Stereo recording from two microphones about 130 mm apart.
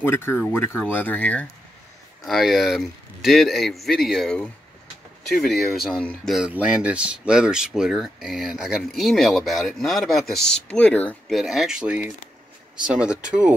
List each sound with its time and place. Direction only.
0.0 s speech: 15° left (ahead or behind)
2.2 s speech: centre (ahead or behind)
11.3 s speech: centre (ahead or behind)